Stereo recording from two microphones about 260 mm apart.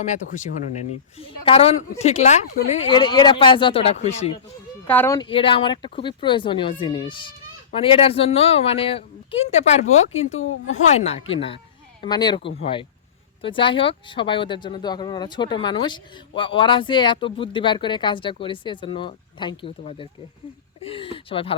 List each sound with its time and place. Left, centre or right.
0.0 s speech: left
4.9 s speech: centre; by 9.8 s left
10.3 s a woman's voice: left
10.9 s speech: left